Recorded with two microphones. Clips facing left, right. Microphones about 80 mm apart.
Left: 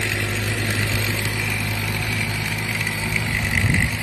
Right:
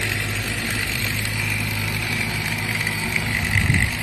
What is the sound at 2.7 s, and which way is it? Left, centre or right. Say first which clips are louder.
Vehicle: even; centre.